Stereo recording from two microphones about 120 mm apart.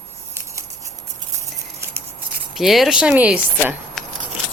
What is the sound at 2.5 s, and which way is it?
Speech, centre (ahead or behind).